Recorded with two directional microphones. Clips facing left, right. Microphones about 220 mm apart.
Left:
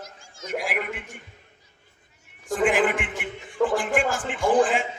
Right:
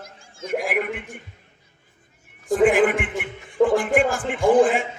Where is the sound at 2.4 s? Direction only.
55° right (ahead or behind).